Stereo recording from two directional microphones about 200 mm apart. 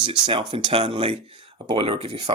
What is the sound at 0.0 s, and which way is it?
Speech, 25° right (ahead or behind).